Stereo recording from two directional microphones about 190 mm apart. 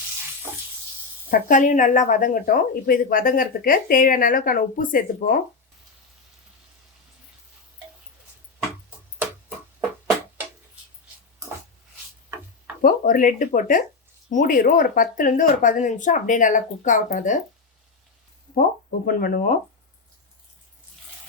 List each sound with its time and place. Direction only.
1.3 s speech: 45° left (ahead or behind)
12.8 s speech: 45° left (ahead or behind)
18.5 s speech: 50° left (ahead or behind)